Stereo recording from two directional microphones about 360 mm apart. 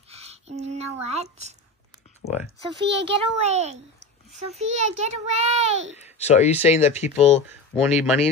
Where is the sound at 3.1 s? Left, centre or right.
Centre.